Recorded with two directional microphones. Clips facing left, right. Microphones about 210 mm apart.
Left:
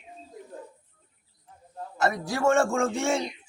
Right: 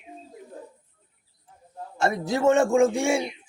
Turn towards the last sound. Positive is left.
turn(degrees=-10)  # may be behind; listen again after turning